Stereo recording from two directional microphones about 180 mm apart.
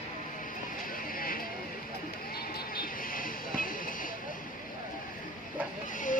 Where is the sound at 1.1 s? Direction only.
55° left (ahead or behind).